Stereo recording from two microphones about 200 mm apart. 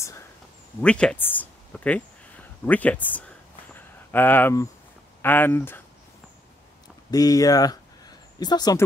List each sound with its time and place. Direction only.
0.7 s speech: 5° left (ahead or behind)
3.7 s a sound: 10° left (ahead or behind)
5.2 s speech: 10° left (ahead or behind)
7.1 s speech: 20° left (ahead or behind)